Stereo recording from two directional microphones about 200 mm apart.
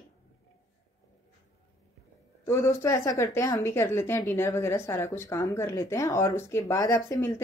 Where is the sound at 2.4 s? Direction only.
15° left (ahead or behind).